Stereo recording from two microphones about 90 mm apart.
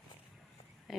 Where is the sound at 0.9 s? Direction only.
Centre (ahead or behind).